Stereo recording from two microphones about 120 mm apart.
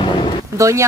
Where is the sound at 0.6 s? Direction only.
25° right (ahead or behind).